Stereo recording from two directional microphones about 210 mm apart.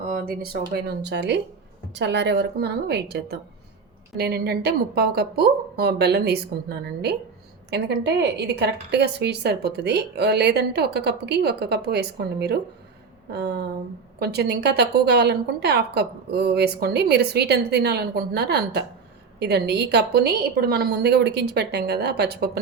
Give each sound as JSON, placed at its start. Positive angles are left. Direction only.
{"t": 0.0, "sound": "a woman's voice", "side_deg": -40}